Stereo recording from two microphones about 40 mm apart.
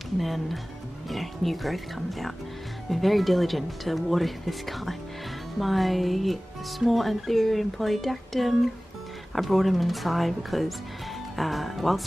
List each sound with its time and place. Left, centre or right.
0.2 s speech: centre